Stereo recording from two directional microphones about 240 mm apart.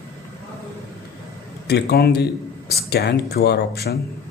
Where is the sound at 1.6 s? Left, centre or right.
Left.